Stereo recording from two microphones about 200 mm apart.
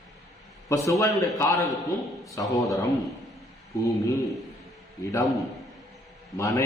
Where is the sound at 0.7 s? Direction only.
15° left (ahead or behind).